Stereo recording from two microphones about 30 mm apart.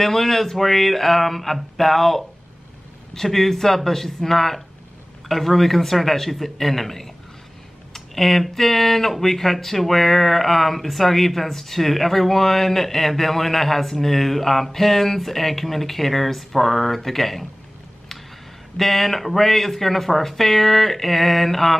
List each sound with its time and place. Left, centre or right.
0.0 s speech: centre
18.8 s speech: centre